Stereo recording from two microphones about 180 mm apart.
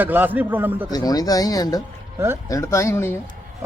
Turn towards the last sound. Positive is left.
turn(degrees=15)  # may be behind; listen again after turning